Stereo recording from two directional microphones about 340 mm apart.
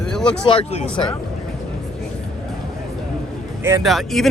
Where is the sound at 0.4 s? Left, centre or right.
Centre.